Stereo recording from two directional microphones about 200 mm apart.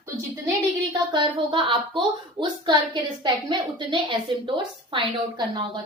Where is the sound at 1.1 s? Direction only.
25° right (ahead or behind).